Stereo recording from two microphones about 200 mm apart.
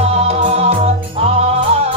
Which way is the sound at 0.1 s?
30° right (ahead or behind).